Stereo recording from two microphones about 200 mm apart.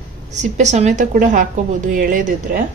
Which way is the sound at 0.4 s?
35° right (ahead or behind).